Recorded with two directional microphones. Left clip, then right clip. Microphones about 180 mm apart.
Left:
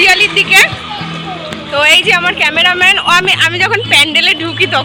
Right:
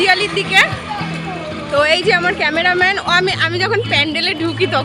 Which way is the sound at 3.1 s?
25° right (ahead or behind).